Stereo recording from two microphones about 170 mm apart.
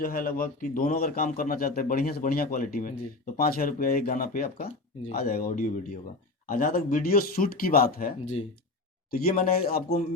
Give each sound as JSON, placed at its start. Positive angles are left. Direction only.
{"t": 0.0, "sound": "a man's voice", "side_deg": 55}
{"t": 9.2, "sound": "a man's voice", "side_deg": 60}